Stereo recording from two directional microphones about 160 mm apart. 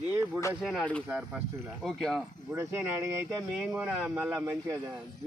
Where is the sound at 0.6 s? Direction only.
5° left (ahead or behind).